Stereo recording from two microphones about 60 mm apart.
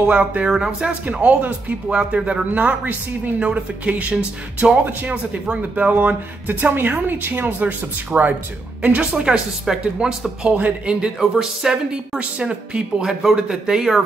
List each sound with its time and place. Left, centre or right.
0.1 s speech: right
11.1 s speech: centre
12.2 s speech: centre